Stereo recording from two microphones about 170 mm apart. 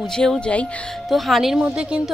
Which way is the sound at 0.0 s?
5° left (ahead or behind).